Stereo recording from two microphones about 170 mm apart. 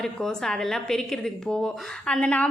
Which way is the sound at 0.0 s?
5° left (ahead or behind).